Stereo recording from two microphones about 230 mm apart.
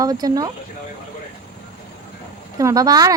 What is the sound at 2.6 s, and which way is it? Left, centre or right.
Speech, centre.